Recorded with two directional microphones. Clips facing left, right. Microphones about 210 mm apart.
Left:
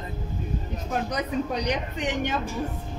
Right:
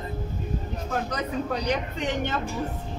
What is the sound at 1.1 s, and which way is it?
Speech, 15° left (ahead or behind).